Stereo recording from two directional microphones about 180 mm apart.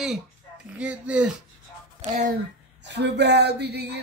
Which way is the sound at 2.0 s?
45° right (ahead or behind).